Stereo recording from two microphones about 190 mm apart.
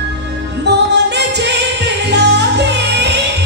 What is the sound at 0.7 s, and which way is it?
Music, 65° right (ahead or behind).